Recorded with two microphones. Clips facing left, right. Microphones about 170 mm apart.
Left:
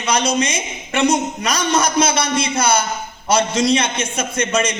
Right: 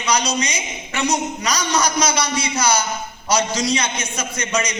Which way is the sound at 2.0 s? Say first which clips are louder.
Left 2 dB; 55° left (ahead or behind).